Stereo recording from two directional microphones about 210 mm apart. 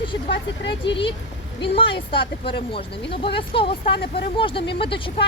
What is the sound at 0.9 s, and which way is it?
Speech, 25° left (ahead or behind).